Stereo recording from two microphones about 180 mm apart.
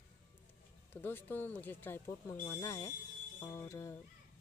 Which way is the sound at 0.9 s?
10° left (ahead or behind).